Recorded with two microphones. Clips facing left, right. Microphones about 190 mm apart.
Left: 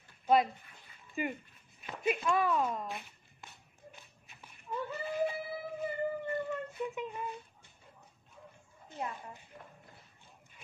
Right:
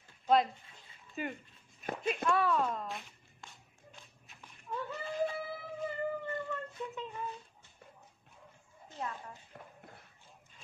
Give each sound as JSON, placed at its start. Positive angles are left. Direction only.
{"t": 1.2, "sound": "a woman's voice", "side_deg": 10}
{"t": 1.8, "sound": "walk", "side_deg": -45}
{"t": 2.2, "sound": "a child's voice", "side_deg": 10}
{"t": 3.9, "sound": "a sound", "side_deg": 5}
{"t": 8.9, "sound": "a woman's voice", "side_deg": 15}